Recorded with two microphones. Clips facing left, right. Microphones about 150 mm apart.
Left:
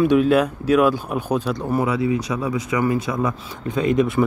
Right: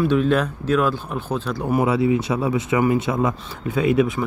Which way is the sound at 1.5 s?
10° right (ahead or behind).